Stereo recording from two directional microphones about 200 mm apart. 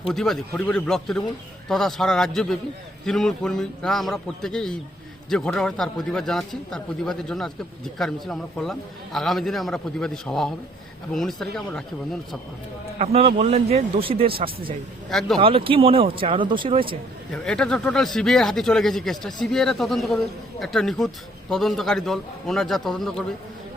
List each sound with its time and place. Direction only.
0.1 s speech: centre (ahead or behind)
13.0 s a man's voice: 30° right (ahead or behind)
15.4 s speech: 25° right (ahead or behind)
17.3 s speech: 5° left (ahead or behind)